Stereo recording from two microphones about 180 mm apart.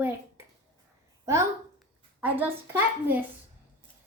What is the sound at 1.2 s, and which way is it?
A woman's voice, 15° right (ahead or behind).